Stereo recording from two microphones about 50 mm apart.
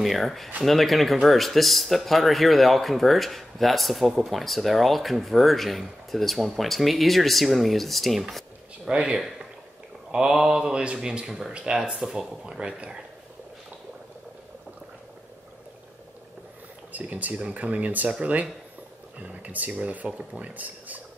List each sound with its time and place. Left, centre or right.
0.0 s speech: centre
8.8 s speech: right
16.9 s speech: right
20.5 s speech: right